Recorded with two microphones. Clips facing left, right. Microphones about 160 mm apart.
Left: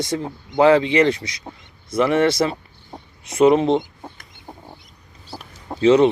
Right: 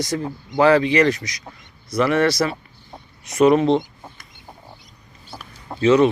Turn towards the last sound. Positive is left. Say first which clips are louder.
# left 1 dB
turn(degrees=25)  # may be behind; listen again after turning